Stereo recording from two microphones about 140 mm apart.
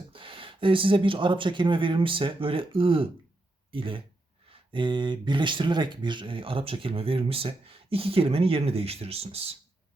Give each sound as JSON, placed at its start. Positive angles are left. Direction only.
{"t": 0.1, "sound": "speech", "side_deg": -40}